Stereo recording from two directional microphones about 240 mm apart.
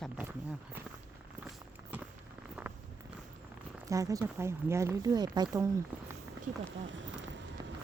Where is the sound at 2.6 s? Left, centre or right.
Centre.